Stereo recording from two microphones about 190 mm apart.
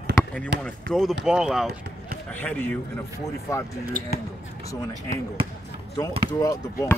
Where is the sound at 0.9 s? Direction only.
Centre (ahead or behind).